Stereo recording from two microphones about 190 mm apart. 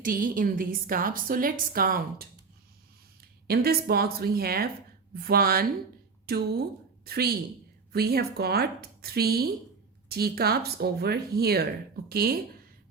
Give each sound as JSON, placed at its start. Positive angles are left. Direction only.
{"t": 0.0, "sound": "a woman's voice", "side_deg": -45}